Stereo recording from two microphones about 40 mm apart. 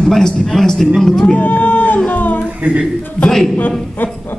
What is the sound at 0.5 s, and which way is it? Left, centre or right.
Speech, centre.